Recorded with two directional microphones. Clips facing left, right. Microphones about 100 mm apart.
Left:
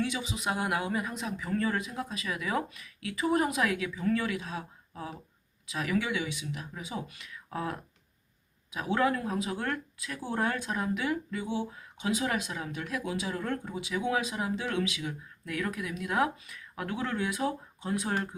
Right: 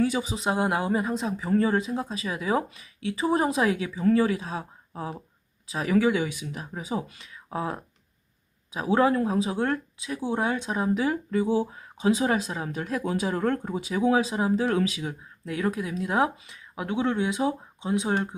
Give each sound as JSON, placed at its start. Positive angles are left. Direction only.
{"t": 0.0, "sound": "speech", "side_deg": -40}
{"t": 15.4, "sound": "speech", "side_deg": -30}